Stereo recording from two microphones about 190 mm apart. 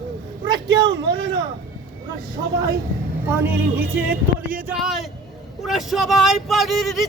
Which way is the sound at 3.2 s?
10° right (ahead or behind).